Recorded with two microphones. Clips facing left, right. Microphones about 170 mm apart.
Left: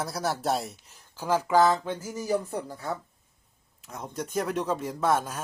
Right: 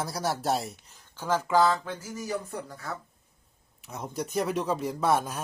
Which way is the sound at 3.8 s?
Centre (ahead or behind).